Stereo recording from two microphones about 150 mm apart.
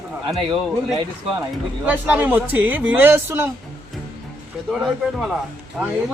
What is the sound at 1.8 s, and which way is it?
Speech, 10° right (ahead or behind).